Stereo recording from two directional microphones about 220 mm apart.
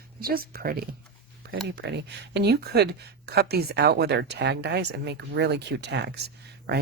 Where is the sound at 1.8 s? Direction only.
50° right (ahead or behind).